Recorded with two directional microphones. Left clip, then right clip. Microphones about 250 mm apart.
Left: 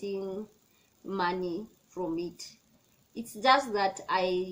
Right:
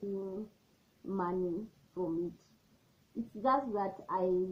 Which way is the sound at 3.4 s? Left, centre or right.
Left.